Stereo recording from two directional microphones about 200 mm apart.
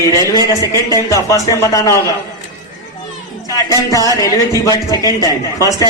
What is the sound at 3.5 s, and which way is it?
Speech, 15° left (ahead or behind).